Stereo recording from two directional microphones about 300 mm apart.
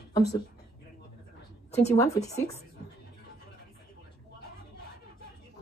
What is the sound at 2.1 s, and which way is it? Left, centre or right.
Speech, centre.